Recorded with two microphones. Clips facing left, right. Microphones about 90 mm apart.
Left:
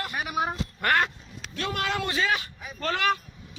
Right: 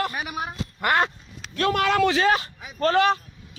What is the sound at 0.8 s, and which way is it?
Speech, 20° right (ahead or behind).